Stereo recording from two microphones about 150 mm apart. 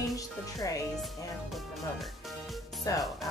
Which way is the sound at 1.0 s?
Centre (ahead or behind).